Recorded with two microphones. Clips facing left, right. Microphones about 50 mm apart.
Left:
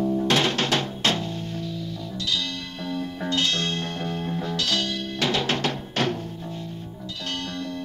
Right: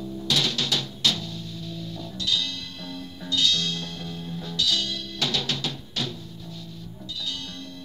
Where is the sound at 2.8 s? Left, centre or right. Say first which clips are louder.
Left 8 dB; left.